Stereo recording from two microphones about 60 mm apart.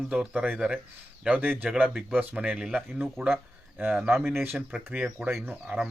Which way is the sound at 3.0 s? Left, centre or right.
Right.